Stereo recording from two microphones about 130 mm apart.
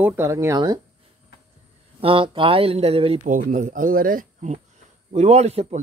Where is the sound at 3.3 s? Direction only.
85° right.